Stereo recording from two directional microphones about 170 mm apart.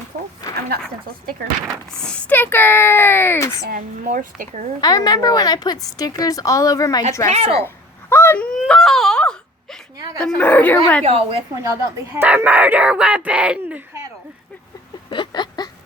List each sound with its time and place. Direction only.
0.5 s speech: 60° right (ahead or behind)
1.6 s speech: 5° left (ahead or behind)
3.7 s speech: 55° right (ahead or behind)
4.8 s a woman's voice: 25° left (ahead or behind)
8.1 s a sound: 15° left (ahead or behind)
8.5 s wail: centre (ahead or behind)
10.2 s speech: 5° left (ahead or behind)
11.0 s a woman's voice: 35° right (ahead or behind)
11.6 s speech: 15° right (ahead or behind)
15.1 s a sound: 25° left (ahead or behind)